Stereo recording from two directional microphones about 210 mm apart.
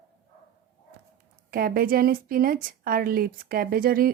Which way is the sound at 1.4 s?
45° right (ahead or behind).